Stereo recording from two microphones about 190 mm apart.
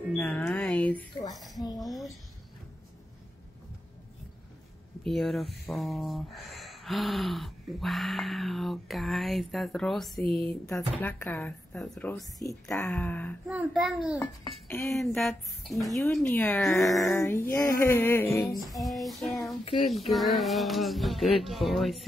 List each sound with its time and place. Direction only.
0.2 s speech: 10° left (ahead or behind)
1.8 s a sound: centre (ahead or behind)
5.0 s speech: centre (ahead or behind)
14.1 s speech: 15° left (ahead or behind)
15.0 s speech: centre (ahead or behind)
18.6 s speech: centre (ahead or behind)